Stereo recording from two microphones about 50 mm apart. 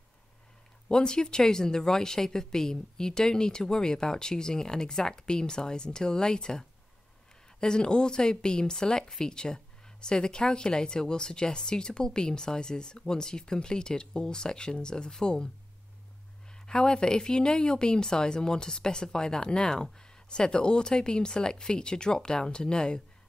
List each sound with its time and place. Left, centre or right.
0.8 s speech: centre
7.6 s speech: centre
16.5 s speech: centre